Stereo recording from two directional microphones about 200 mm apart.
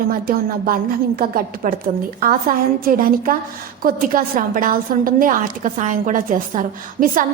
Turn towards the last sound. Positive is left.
turn(degrees=-40)  # may be behind; listen again after turning